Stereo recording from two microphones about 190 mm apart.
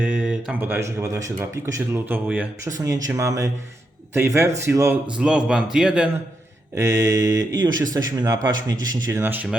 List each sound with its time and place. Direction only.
0.0 s speech: 10° right (ahead or behind)
6.7 s speech: 15° right (ahead or behind)